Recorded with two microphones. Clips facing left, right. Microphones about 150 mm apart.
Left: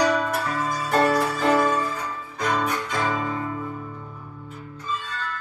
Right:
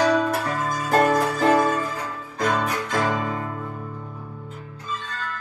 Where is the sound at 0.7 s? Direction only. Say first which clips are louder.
Right 3 dB; 45° right (ahead or behind).